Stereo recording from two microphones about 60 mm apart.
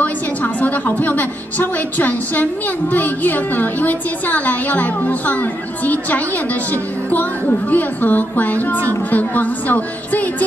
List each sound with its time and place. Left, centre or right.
0.0 s a woman's voice: left